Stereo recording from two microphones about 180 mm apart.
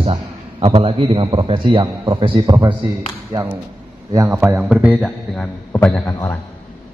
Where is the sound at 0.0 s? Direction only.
30° right (ahead or behind).